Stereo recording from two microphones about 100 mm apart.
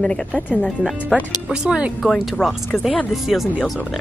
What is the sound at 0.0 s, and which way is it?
Speech, 10° left (ahead or behind).